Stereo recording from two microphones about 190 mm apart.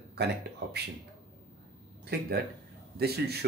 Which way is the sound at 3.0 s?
55° right (ahead or behind).